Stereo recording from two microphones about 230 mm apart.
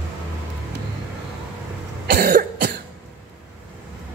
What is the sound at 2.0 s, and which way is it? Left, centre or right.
Cough, right.